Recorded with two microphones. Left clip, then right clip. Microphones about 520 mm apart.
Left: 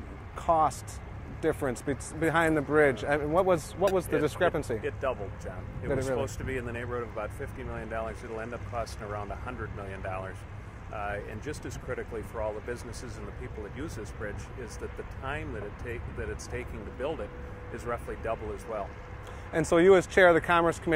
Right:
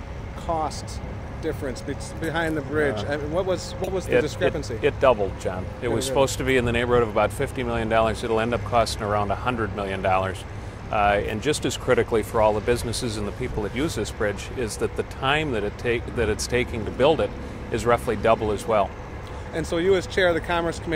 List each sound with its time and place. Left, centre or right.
0.5 s speech: left
4.8 s speech: right
19.5 s speech: left